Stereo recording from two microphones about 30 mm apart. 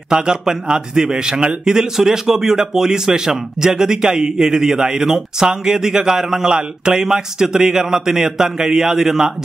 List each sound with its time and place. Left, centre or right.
0.1 s a man's voice: right
6.5 s speech: right
7.1 s a man's voice: centre